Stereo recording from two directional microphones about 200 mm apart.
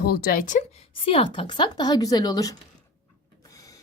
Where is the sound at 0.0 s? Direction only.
50° left (ahead or behind).